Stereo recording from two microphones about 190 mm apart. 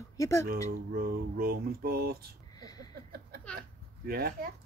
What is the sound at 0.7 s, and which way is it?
Mantra, 50° right (ahead or behind).